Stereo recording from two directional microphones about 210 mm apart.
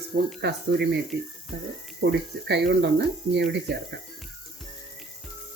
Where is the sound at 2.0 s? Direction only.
50° right (ahead or behind).